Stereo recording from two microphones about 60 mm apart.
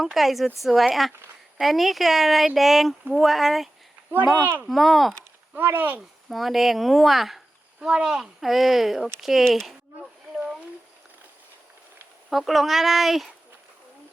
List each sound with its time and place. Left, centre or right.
0.0 s speech: centre
4.4 s speech: right
4.7 s speech: centre
5.5 s speech: right
6.2 s speech: centre
9.6 s a sound: centre
12.3 s speech: centre